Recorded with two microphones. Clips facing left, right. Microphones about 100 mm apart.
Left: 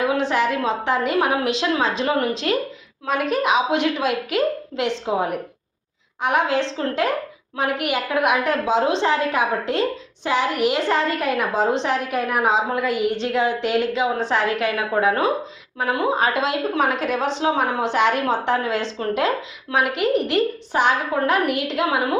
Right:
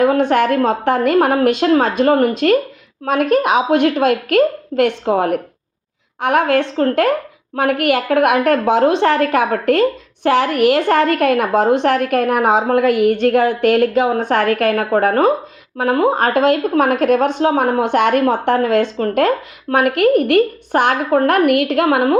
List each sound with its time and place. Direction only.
0.0 s a woman's voice: 50° right (ahead or behind)